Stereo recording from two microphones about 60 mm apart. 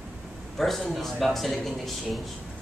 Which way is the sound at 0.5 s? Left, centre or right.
Centre.